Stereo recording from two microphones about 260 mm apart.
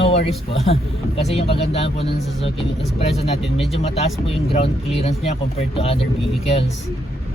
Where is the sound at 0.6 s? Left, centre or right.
Left.